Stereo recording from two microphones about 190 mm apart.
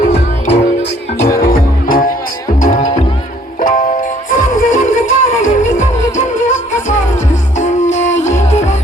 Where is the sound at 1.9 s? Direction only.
45° left (ahead or behind).